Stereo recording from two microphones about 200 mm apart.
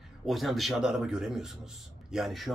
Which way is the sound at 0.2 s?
Centre (ahead or behind).